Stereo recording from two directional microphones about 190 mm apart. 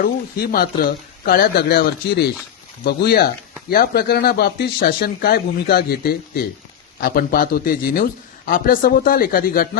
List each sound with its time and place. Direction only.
0.0 s speech: 50° left (ahead or behind)